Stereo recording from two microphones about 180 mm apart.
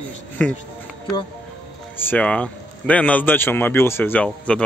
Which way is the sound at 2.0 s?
10° left (ahead or behind).